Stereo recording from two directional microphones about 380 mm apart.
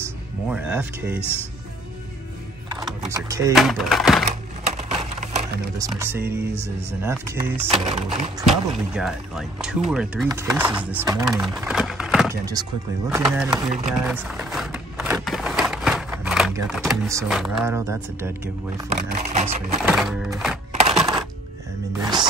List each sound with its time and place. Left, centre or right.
0.0 s speech: centre
2.8 s speech: centre
4.6 s a sound: centre
5.8 s speech: centre
8.5 s speech: centre
19.9 s speech: centre
20.9 s coin: centre
21.9 s music: centre